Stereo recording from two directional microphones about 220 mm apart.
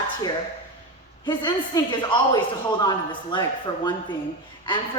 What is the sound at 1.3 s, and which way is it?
A man's voice, 20° left (ahead or behind).